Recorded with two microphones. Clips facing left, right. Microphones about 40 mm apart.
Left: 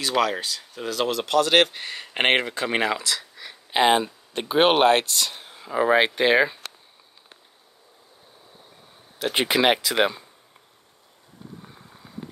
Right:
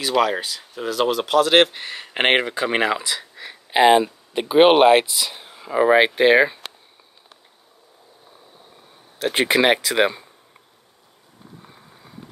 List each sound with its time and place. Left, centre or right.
0.2 s speech: centre
9.2 s speech: centre